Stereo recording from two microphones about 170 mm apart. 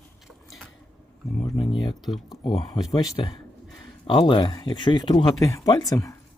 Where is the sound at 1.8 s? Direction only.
25° left (ahead or behind).